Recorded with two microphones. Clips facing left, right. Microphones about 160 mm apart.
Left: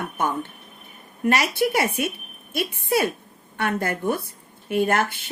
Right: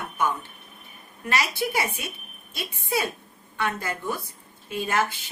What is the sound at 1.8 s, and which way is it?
Speech, 50° left (ahead or behind).